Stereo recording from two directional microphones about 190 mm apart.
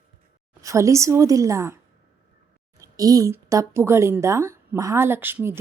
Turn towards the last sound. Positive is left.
turn(degrees=-10)  # may be behind; listen again after turning